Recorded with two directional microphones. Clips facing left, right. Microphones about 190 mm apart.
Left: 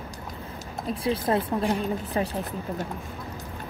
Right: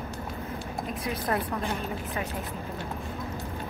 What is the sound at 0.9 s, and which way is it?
Speech, 30° left (ahead or behind).